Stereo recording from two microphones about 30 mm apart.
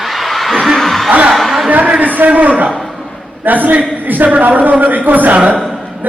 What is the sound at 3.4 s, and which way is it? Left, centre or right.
Speech, right.